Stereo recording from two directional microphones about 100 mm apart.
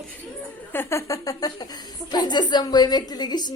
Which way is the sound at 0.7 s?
25° left (ahead or behind).